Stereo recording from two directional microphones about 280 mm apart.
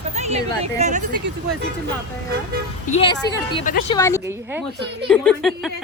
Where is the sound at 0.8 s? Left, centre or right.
Right.